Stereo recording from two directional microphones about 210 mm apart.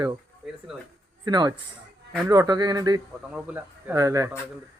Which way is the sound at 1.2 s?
20° right (ahead or behind).